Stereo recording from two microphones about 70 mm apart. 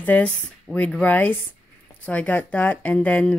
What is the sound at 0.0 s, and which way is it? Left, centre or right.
Speech, left.